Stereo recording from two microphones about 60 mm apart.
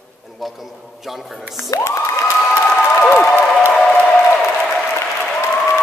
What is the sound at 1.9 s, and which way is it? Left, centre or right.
Cheering, left.